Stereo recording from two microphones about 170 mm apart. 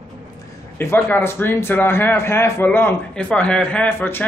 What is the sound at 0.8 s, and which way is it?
A man's voice, 10° left (ahead or behind).